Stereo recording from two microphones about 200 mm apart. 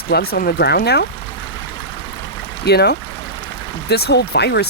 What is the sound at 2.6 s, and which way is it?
Speech, 55° left (ahead or behind).